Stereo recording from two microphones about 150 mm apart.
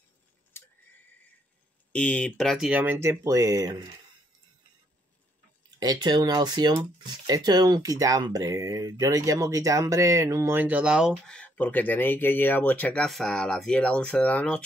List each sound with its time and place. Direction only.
1.9 s speech: 10° left (ahead or behind); by 3.8 s 25° right (ahead or behind)
5.8 s speech: 25° right (ahead or behind); by 11.1 s 5° right (ahead or behind)
11.2 s speech: 5° left (ahead or behind)